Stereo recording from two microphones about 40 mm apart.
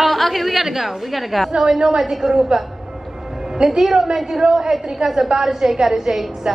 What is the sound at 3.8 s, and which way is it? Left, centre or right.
A woman's voice, centre.